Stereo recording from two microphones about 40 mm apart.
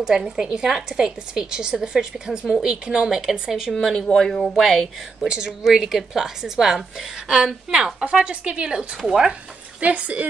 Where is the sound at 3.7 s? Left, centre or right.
Centre.